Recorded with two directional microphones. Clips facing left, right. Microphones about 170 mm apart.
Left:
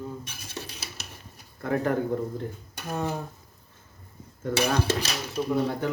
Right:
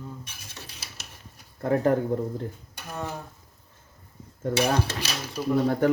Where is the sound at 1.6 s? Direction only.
35° right (ahead or behind).